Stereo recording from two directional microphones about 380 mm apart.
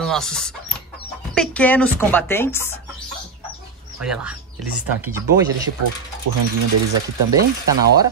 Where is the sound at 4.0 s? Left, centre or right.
Centre.